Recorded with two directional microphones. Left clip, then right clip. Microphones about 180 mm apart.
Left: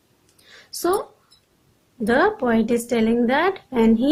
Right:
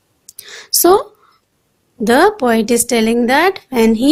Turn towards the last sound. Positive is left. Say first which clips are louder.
# right 6 dB
turn(degrees=-35)  # may be behind; listen again after turning